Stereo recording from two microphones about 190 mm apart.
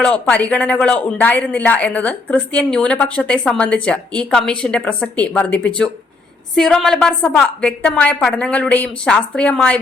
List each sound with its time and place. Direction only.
0.0 s speech: 5° left (ahead or behind)